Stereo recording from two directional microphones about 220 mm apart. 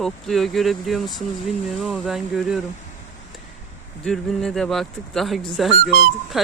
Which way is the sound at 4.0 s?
5° left (ahead or behind).